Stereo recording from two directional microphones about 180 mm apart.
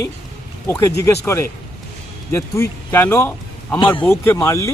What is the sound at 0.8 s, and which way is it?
A man's voice, 15° left (ahead or behind).